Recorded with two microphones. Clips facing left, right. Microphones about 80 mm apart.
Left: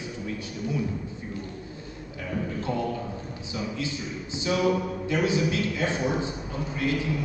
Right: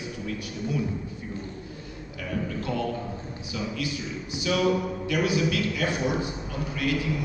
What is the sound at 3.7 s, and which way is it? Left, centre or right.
A man's voice, left.